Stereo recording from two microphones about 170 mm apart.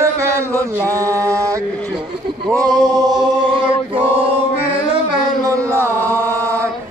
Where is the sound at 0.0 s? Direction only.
15° right (ahead or behind).